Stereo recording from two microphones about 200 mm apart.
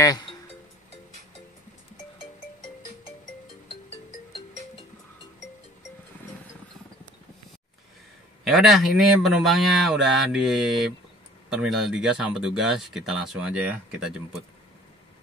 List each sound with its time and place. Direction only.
0.0 s music: 20° left (ahead or behind)
8.5 s speech: centre (ahead or behind)